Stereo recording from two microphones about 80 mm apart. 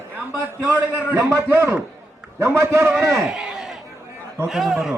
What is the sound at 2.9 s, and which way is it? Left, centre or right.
A man's voice, centre.